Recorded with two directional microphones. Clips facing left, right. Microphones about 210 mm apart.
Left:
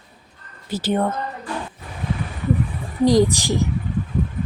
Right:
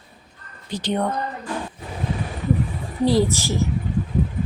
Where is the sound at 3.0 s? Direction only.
15° left (ahead or behind).